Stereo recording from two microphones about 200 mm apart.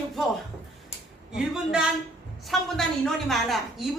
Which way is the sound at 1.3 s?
5° right (ahead or behind).